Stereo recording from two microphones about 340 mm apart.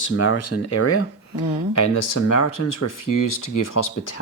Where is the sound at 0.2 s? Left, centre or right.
Left.